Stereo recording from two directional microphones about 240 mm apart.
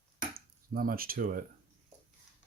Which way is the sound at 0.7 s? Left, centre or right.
Right.